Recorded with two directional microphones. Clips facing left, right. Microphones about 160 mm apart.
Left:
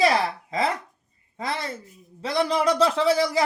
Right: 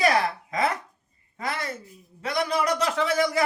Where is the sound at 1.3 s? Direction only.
30° left (ahead or behind).